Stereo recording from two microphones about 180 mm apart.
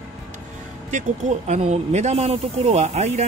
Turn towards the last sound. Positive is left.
turn(degrees=-40)  # may be behind; listen again after turning